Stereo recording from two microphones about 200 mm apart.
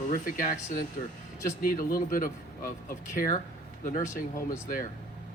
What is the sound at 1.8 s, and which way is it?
Speech, 45° left (ahead or behind).